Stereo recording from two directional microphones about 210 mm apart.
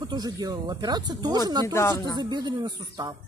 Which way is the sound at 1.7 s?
20° left (ahead or behind).